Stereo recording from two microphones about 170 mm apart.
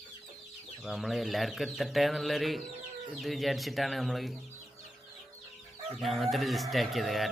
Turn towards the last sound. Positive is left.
turn(degrees=0)  # may be behind; listen again after turning